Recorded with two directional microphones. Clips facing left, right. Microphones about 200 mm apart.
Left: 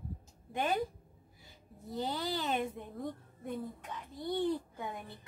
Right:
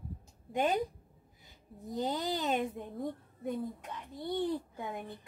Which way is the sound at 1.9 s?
15° right (ahead or behind).